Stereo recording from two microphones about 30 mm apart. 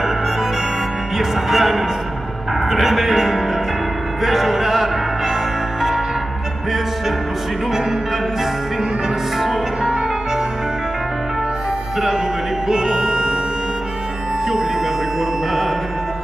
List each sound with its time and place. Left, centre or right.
1.1 s music: centre
2.7 s speech: centre
4.2 s music: centre
12.6 s music: centre